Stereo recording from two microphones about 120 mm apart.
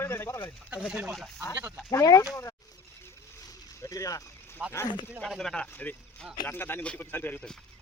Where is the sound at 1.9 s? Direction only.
30° left (ahead or behind).